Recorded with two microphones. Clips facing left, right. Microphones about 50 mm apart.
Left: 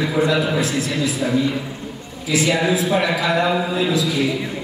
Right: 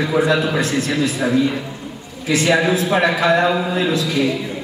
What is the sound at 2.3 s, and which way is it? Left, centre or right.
A man's voice, right.